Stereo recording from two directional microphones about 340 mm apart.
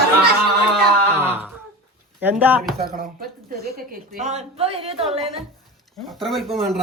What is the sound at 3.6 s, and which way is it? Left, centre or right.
A woman's voice, right.